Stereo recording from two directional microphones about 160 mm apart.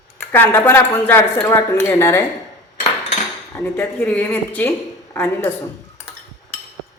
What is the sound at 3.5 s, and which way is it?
A woman's voice, 10° left (ahead or behind).